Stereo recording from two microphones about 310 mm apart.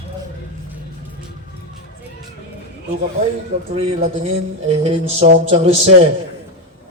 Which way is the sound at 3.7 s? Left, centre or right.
Centre.